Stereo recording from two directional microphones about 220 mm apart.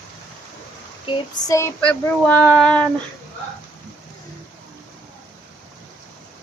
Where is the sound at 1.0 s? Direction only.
15° left (ahead or behind).